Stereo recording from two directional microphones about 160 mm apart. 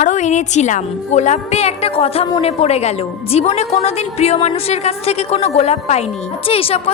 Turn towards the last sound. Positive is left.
turn(degrees=40)  # may be behind; listen again after turning